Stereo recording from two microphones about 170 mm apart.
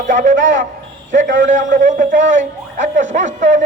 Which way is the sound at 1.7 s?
50° right (ahead or behind).